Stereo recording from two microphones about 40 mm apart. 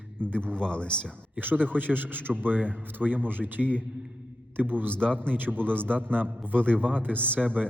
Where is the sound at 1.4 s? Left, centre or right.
Right.